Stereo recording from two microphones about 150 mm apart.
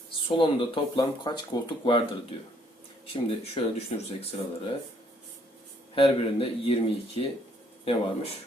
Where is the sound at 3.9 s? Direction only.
45° left (ahead or behind).